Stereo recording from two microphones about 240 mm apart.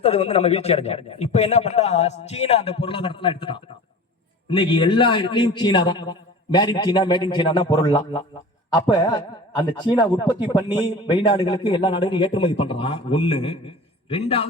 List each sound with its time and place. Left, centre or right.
0.0 s a man's voice: left